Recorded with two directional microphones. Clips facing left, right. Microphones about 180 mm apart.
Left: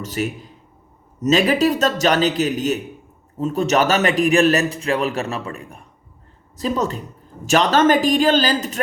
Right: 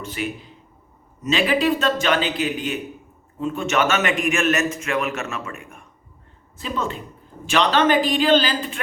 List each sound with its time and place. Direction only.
0.0 s a man's voice: 40° left (ahead or behind)